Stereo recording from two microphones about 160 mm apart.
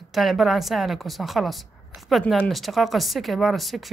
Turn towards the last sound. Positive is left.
turn(degrees=0)  # may be behind; listen again after turning